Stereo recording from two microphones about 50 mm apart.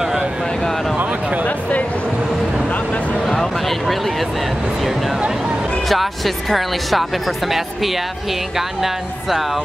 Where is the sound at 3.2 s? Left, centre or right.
Centre.